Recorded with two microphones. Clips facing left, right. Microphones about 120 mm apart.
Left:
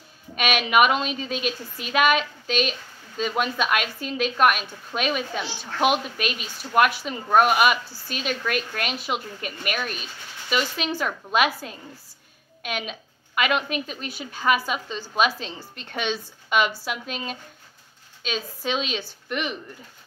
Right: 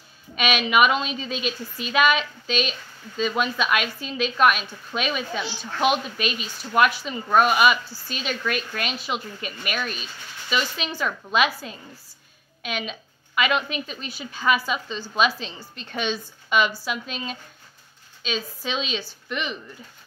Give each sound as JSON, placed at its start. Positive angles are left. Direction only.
{"t": 0.4, "sound": "a woman's voice", "side_deg": 55}